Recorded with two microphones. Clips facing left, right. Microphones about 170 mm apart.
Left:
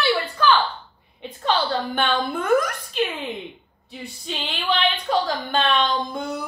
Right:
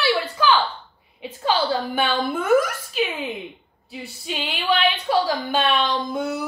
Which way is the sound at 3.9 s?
5° right (ahead or behind).